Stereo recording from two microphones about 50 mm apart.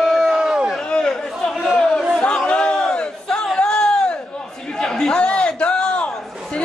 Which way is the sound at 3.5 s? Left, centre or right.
Centre.